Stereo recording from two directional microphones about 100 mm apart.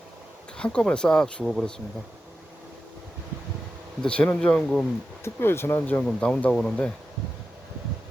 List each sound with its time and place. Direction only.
0.5 s speech: 10° left (ahead or behind)
4.0 s speech: 10° left (ahead or behind)
5.2 s speech: 25° left (ahead or behind)